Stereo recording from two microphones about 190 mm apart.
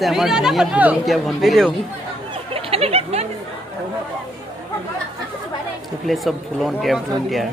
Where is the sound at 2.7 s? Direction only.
30° right (ahead or behind).